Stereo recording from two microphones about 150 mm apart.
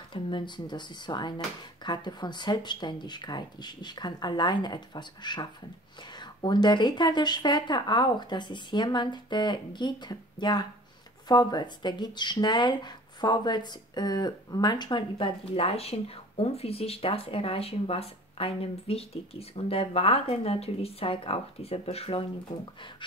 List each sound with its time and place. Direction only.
0.1 s speech: 30° left (ahead or behind)